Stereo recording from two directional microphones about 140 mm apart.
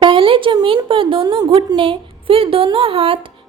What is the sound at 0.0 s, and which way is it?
A woman's voice, 35° right (ahead or behind).